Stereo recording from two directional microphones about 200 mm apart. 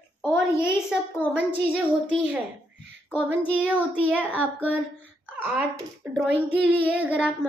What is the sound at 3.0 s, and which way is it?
Speech, 10° left (ahead or behind).